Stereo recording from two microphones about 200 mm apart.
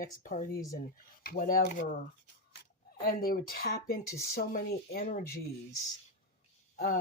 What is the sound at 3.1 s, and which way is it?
Speech, 45° left (ahead or behind).